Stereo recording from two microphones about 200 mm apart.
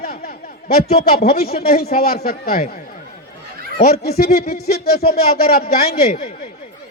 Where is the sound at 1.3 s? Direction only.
50° left (ahead or behind).